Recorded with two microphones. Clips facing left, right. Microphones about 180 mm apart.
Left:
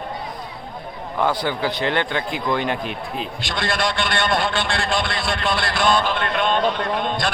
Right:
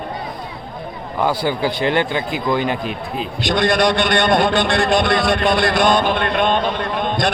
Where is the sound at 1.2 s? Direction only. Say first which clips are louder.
Right 3 dB; 10° right (ahead or behind).